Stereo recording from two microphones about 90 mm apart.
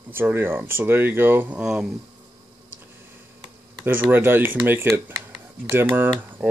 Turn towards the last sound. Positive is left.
turn(degrees=-15)  # may be behind; listen again after turning